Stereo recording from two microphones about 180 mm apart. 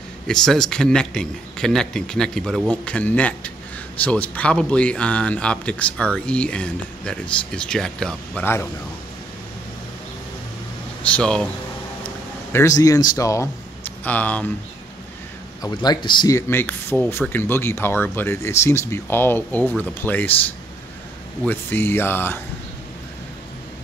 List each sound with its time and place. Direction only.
0.3 s a man's voice: centre (ahead or behind)
11.0 s speech: 5° left (ahead or behind)
12.5 s a man's voice: 20° left (ahead or behind)
15.6 s speech: 25° left (ahead or behind)
21.5 s speech: 10° left (ahead or behind)